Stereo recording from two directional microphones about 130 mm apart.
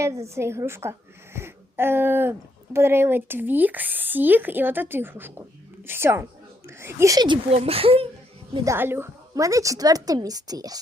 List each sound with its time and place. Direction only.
0.0 s a woman's voice: 20° right (ahead or behind)
7.5 s speech: 50° right (ahead or behind)
8.6 s speech: 20° right (ahead or behind)